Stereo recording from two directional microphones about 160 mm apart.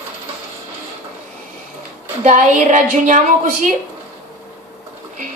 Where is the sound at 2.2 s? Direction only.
50° right (ahead or behind).